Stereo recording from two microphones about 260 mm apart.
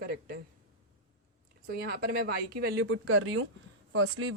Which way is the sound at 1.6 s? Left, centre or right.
Right.